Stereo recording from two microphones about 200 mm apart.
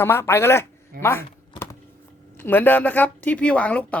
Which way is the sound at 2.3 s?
10° left (ahead or behind).